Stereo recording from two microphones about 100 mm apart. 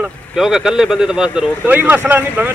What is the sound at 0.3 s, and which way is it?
Speech, 5° right (ahead or behind).